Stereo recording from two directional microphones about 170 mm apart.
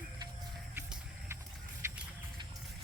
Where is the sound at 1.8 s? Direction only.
15° right (ahead or behind).